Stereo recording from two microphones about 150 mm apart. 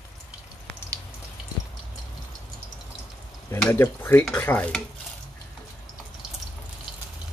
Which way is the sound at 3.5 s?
10° left (ahead or behind).